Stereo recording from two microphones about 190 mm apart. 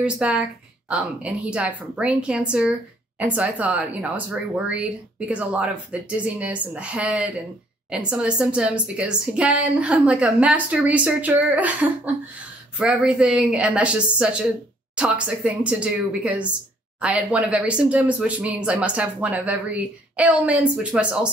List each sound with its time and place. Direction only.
0.0 s a woman's voice: 5° right (ahead or behind)
12.7 s a woman's voice: 5° right (ahead or behind)